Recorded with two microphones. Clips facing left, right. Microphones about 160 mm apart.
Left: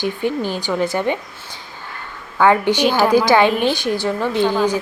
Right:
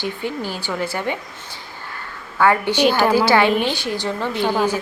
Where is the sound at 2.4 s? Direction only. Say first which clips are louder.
Left 2 dB; 15° left (ahead or behind).